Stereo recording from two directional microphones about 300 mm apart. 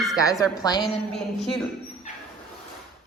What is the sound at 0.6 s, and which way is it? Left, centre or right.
Speech, centre.